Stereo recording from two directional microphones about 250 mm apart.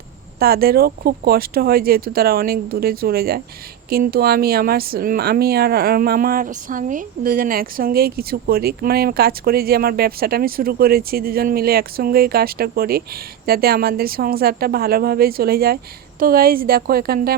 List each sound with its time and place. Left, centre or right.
0.3 s a woman's voice: right